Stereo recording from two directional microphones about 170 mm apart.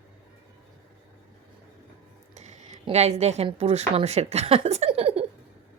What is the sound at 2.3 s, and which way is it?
Speech, 40° right (ahead or behind).